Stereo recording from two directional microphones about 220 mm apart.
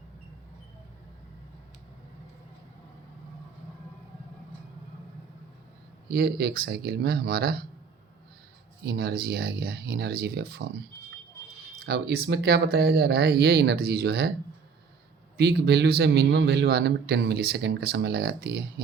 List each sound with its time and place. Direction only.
6.1 s a man's voice: 45° right (ahead or behind)
8.8 s a man's voice: 45° right (ahead or behind)
15.4 s a man's voice: 50° right (ahead or behind)